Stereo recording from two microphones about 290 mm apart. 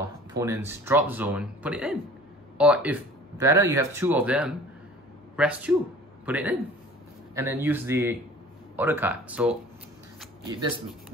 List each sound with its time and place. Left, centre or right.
0.3 s a man's voice: centre